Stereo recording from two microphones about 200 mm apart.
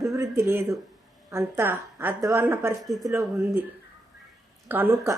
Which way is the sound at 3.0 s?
15° right (ahead or behind).